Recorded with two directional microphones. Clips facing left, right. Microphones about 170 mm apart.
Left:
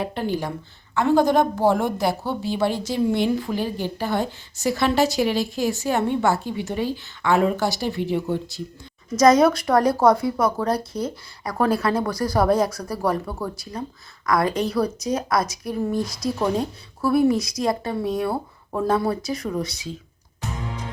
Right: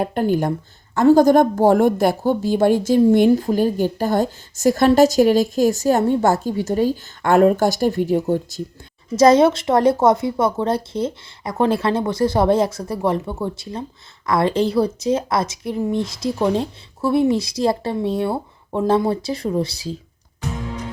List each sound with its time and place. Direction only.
0.0 s a woman's voice: 50° right (ahead or behind)
9.1 s speech: 30° right (ahead or behind)